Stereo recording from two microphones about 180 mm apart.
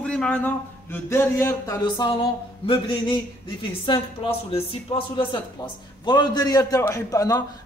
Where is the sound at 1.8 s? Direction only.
25° left (ahead or behind).